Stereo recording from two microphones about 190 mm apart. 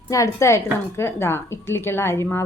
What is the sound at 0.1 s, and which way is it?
A woman's voice, 15° left (ahead or behind).